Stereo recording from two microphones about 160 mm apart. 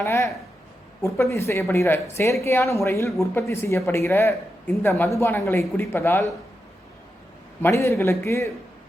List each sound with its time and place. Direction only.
0.0 s speech: 15° left (ahead or behind)
7.6 s speech: 15° left (ahead or behind)